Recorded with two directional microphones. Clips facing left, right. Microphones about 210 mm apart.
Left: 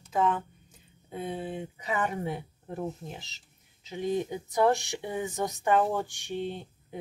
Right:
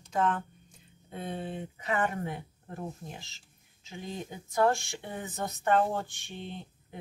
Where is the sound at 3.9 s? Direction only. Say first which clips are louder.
Left 10 dB; 20° left (ahead or behind).